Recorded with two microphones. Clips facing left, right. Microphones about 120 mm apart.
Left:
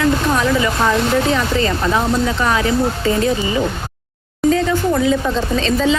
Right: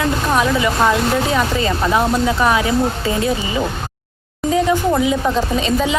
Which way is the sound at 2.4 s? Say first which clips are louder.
Right 2 dB; 10° right (ahead or behind).